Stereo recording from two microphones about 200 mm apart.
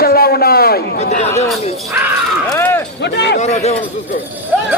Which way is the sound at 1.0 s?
35° left (ahead or behind).